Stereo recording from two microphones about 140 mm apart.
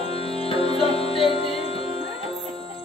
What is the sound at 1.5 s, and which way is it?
Music, 40° right (ahead or behind).